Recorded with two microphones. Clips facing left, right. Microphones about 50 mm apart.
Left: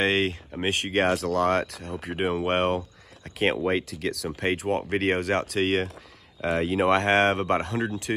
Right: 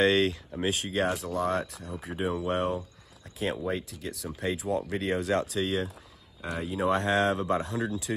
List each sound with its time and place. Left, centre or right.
0.0 s speech: left
1.1 s speech: left
4.4 s speech: left
6.4 s speech: left